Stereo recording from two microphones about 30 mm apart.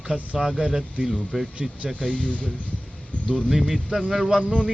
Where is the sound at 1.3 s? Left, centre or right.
Centre.